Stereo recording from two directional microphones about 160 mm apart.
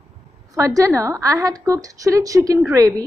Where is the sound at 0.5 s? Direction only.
20° right (ahead or behind).